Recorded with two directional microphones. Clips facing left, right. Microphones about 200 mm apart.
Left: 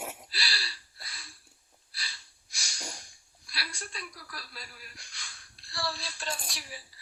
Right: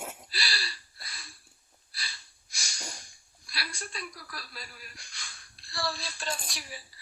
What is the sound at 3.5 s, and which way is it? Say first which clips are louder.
A woman's voice: right 2 dB; 50° right (ahead or behind).